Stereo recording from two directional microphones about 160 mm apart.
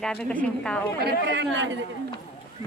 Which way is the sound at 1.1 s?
90° right.